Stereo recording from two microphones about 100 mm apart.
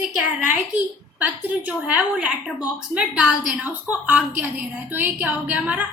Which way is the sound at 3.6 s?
15° right (ahead or behind).